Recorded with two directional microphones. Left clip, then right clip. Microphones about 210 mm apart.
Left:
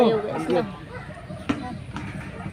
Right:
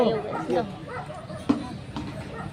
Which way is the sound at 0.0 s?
10° left (ahead or behind).